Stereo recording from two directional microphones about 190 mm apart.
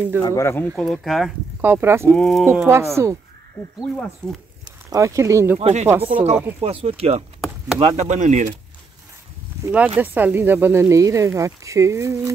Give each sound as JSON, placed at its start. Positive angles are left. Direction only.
{"t": 0.2, "sound": "speech", "side_deg": 15}
{"t": 0.7, "sound": "speech", "side_deg": 0}
{"t": 1.6, "sound": "speech", "side_deg": -10}
{"t": 2.1, "sound": "speech", "side_deg": 0}
{"t": 2.4, "sound": "speech", "side_deg": -15}
{"t": 3.8, "sound": "speech", "side_deg": 0}
{"t": 4.6, "sound": "speech", "side_deg": -15}
{"t": 5.6, "sound": "speech", "side_deg": -35}
{"t": 9.6, "sound": "speech", "side_deg": -10}